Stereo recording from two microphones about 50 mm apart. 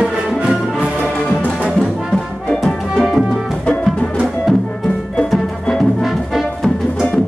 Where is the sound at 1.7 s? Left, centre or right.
Centre.